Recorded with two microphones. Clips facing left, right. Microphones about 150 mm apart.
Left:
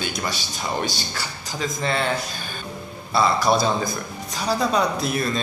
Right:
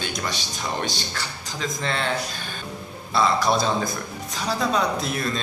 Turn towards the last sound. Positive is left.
turn(degrees=5)  # may be behind; listen again after turning